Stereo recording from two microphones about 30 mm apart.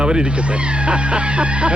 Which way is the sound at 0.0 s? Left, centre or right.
Right.